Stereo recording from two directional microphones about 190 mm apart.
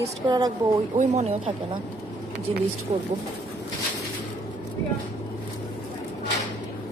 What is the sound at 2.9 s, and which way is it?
Speech, 35° right (ahead or behind).